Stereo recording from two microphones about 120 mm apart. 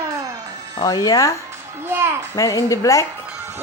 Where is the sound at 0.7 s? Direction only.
35° left (ahead or behind).